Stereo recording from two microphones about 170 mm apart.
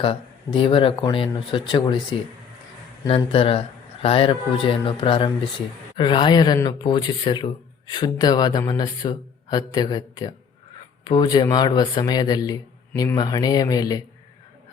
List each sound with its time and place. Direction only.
0.0 s speech: 30° left (ahead or behind)
3.1 s speech: 35° left (ahead or behind)